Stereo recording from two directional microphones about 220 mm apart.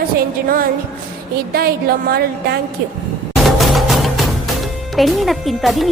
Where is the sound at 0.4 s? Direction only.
40° right (ahead or behind).